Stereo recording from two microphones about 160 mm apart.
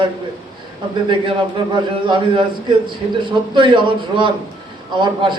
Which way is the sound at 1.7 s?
30° right (ahead or behind).